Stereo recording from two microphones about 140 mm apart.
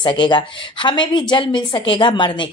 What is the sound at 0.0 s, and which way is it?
A woman's voice, 35° left (ahead or behind).